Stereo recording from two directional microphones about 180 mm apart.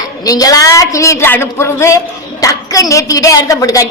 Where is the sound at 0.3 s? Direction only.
20° left (ahead or behind).